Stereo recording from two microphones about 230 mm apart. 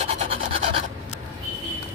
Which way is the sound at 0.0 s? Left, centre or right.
Right.